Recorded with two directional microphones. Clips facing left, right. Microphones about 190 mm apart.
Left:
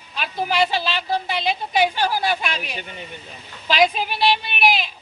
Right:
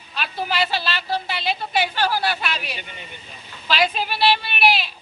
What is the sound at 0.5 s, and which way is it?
A woman's voice, 15° left (ahead or behind).